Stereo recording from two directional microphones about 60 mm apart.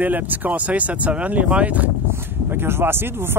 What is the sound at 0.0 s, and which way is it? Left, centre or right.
Speech, right.